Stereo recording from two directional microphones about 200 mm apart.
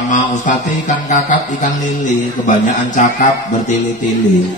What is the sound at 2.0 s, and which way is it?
Mantra, 40° left (ahead or behind).